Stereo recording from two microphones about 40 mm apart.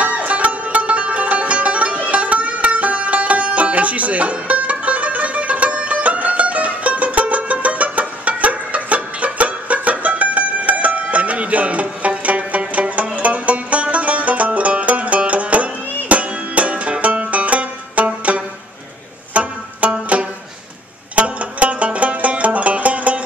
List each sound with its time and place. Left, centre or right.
0.0 s music: right